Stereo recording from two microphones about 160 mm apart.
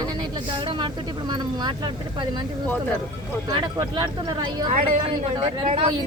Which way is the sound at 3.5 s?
30° right (ahead or behind).